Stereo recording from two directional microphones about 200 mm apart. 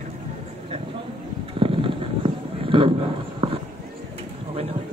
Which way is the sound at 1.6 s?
25° right (ahead or behind).